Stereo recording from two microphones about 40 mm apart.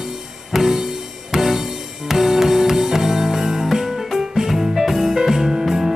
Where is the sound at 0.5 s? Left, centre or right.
Centre.